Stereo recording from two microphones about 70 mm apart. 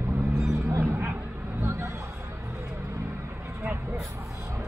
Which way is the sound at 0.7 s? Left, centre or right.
Right.